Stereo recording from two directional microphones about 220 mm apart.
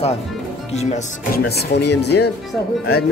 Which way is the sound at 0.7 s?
30° left (ahead or behind).